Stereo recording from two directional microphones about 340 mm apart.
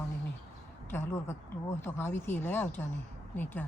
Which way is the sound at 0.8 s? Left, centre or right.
Centre.